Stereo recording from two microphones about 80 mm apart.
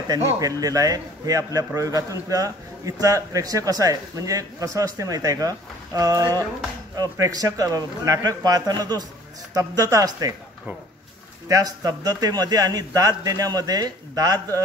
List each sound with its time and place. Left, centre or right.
0.4 s a man's voice: right
9.5 s a man's voice: right
11.4 s a man's voice: right